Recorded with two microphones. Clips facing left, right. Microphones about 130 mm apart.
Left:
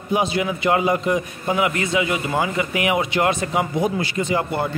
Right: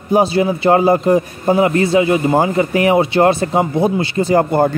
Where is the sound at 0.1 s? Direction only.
35° right (ahead or behind).